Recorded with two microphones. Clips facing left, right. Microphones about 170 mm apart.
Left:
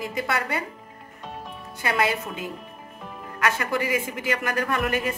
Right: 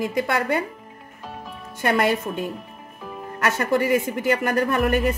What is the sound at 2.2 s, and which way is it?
Speech, 65° right (ahead or behind).